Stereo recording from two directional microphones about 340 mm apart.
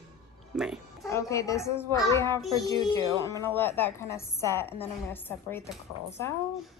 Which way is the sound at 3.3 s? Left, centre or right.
Centre.